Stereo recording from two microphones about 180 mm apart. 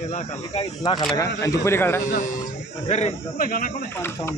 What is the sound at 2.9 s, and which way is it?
Speech, 45° left (ahead or behind).